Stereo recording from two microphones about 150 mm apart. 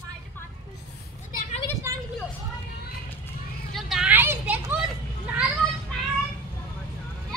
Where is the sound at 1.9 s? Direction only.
20° right (ahead or behind).